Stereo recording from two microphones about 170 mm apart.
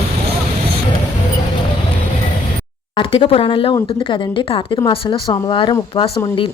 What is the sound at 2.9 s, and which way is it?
A woman's voice, 30° left (ahead or behind).